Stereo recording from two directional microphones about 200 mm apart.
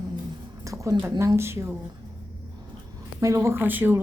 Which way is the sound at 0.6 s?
15° right (ahead or behind).